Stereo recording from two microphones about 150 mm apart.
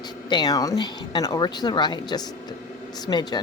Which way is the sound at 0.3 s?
30° left (ahead or behind).